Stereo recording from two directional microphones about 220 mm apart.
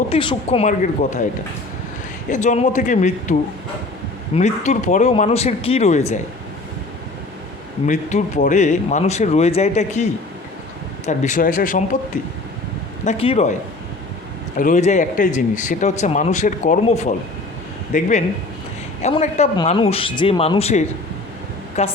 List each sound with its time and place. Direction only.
0.1 s speech: 25° left (ahead or behind)
0.7 s speech: 35° left (ahead or behind)
2.3 s speech: 35° left (ahead or behind)
4.4 s speech: 30° left (ahead or behind)
7.9 s speech: 35° left (ahead or behind)
13.1 s speech: 25° left (ahead or behind)